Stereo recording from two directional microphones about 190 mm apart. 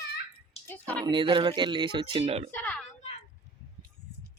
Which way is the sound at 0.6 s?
10° left (ahead or behind).